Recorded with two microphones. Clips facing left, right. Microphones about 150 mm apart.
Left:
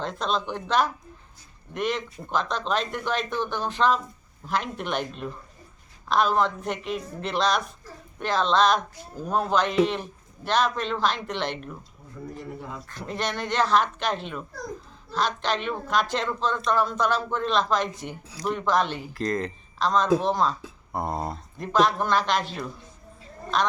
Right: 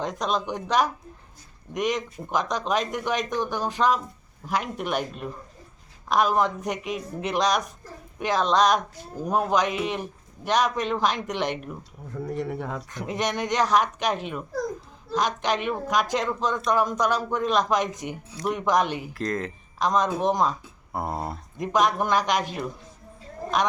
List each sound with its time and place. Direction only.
0.0 s speech: 15° right (ahead or behind)
12.3 s a sound: 70° right (ahead or behind)
12.9 s speech: 15° right (ahead or behind)
19.1 s speech: centre (ahead or behind)
19.8 s speech: 15° right (ahead or behind)
20.9 s a sound: 5° right (ahead or behind)
21.6 s speech: 15° right (ahead or behind)